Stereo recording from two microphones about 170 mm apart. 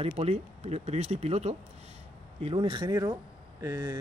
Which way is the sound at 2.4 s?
30° right (ahead or behind).